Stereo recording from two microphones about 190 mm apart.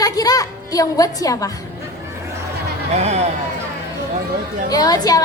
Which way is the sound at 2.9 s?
35° right (ahead or behind).